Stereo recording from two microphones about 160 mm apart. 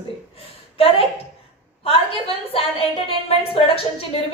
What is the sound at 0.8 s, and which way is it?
A woman's voice, 35° left (ahead or behind).